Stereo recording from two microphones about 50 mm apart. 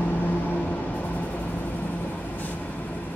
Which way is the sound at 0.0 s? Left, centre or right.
Left.